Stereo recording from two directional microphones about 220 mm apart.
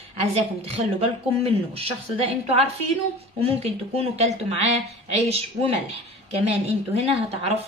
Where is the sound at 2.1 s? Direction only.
30° right (ahead or behind).